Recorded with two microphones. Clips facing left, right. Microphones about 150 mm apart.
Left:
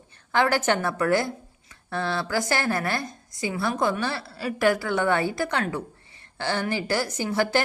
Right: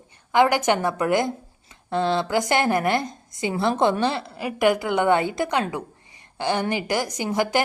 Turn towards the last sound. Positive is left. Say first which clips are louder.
# right 1 dB
turn(degrees=-15)  # may be behind; listen again after turning